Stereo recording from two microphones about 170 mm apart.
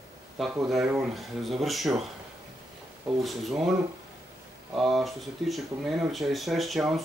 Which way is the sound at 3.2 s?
Centre (ahead or behind).